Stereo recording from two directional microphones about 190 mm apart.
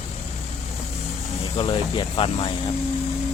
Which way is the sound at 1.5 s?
25° left (ahead or behind).